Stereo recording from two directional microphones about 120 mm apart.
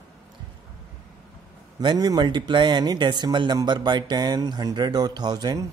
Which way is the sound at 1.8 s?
35° right (ahead or behind).